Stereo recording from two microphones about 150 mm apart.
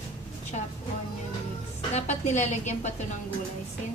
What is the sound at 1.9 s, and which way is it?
Speech, 50° left (ahead or behind).